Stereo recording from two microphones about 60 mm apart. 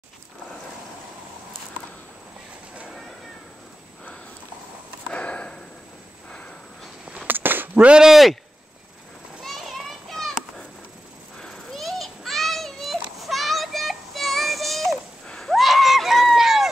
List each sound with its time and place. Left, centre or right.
5.1 s sniff: centre
7.2 s a sound: right
8.0 s speech: centre
9.4 s children playing: centre
11.3 s children playing: centre
15.5 s a sound: centre